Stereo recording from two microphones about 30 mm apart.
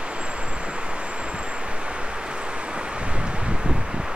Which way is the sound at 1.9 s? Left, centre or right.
Right.